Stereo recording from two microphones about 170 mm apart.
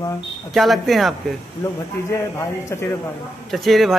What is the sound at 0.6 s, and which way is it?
Speech, centre (ahead or behind).